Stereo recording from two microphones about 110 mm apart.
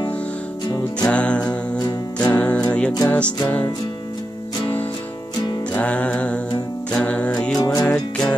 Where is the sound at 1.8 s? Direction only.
35° left (ahead or behind).